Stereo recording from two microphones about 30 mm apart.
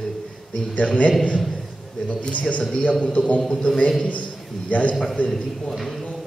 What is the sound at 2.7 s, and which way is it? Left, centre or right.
Speech, left.